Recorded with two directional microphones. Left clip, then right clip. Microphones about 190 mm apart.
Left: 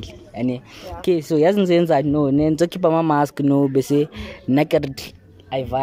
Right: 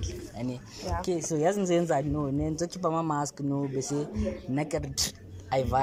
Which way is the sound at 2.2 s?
55° left (ahead or behind).